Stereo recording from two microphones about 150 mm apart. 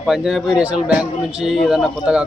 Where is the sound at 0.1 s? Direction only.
5° right (ahead or behind).